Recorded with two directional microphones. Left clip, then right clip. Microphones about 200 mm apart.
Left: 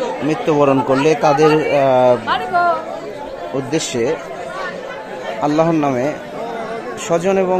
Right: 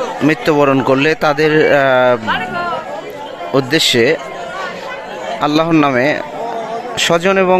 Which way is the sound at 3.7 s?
15° right (ahead or behind).